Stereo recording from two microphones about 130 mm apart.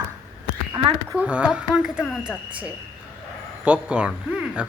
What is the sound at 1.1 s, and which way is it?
Speech, 10° right (ahead or behind).